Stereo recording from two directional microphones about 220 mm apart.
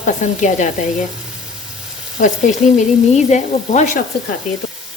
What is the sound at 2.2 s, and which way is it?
Speech, 35° left (ahead or behind).